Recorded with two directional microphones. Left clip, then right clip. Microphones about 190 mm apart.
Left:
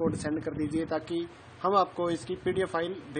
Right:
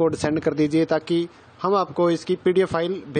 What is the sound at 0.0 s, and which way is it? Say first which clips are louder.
Speech: right 10 dB; 40° right (ahead or behind).